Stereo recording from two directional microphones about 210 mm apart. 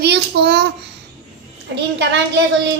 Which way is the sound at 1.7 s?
55° right (ahead or behind).